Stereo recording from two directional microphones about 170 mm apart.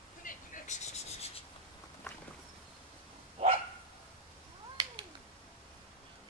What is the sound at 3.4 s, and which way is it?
Dog, 40° right (ahead or behind).